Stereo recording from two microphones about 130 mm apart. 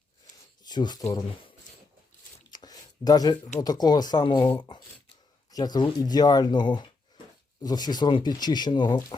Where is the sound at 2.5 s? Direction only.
30° left (ahead or behind).